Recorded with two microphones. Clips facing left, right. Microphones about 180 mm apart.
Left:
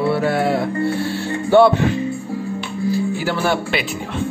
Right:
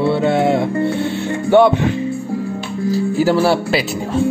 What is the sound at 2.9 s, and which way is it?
Speech, 40° right (ahead or behind).